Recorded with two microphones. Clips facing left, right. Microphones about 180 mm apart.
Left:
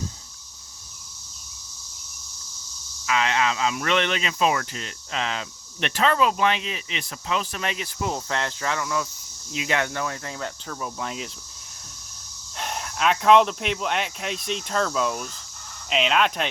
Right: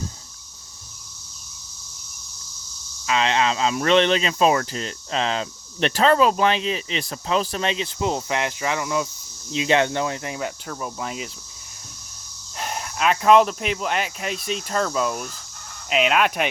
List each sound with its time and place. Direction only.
3.1 s speech: 30° right (ahead or behind)
9.5 s cricket: 25° right (ahead or behind)
10.7 s speech: 5° right (ahead or behind)
12.5 s speech: 5° right (ahead or behind)